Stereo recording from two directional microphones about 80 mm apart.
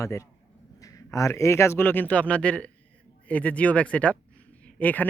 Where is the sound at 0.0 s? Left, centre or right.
Left.